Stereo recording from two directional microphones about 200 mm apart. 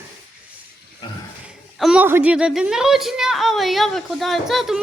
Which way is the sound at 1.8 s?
5° right (ahead or behind).